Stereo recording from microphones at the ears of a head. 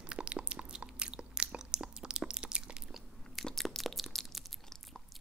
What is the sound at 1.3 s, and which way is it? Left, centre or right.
Biting, right.